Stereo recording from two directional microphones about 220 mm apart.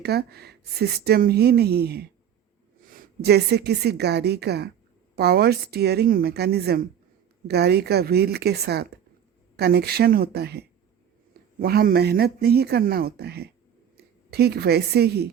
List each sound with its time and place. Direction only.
0.0 s a woman's voice: 45° right (ahead or behind)